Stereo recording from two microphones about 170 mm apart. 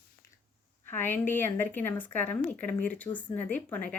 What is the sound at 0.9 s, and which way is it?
Speech, 15° left (ahead or behind).